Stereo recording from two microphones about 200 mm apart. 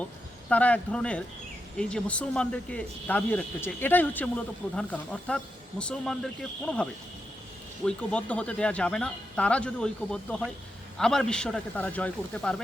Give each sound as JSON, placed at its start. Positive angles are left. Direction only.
{"t": 0.5, "sound": "speech", "side_deg": 5}
{"t": 7.9, "sound": "speech", "side_deg": 5}